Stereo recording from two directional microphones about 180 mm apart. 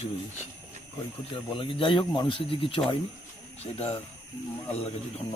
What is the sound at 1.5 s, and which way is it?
Speech, 30° left (ahead or behind).